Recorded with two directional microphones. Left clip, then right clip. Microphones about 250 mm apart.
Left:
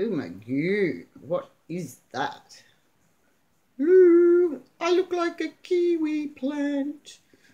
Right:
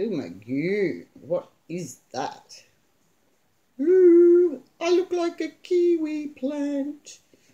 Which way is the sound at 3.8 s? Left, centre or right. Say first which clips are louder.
Right 1 dB; centre.